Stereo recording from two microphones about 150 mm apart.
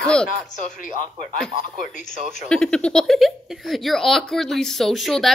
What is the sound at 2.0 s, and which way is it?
Speech, 55° left (ahead or behind).